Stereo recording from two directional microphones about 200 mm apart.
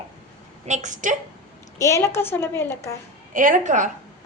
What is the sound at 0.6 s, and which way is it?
Speech, 35° right (ahead or behind).